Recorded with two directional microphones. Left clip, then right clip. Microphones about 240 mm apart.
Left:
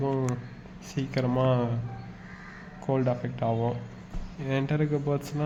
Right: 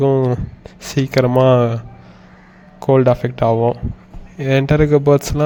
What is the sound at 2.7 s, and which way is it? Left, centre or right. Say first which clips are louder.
A man's voice: right 15 dB; right.